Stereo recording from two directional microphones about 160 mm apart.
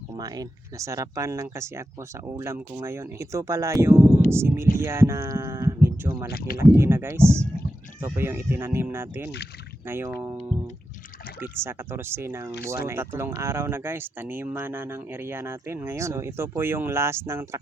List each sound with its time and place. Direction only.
0.2 s speech: 20° right (ahead or behind)
11.6 s speech: 15° right (ahead or behind)